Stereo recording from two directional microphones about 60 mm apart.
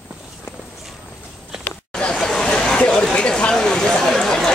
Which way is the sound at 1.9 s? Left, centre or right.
Centre.